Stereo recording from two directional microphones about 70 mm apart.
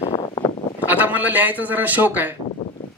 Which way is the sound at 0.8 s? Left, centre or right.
Right.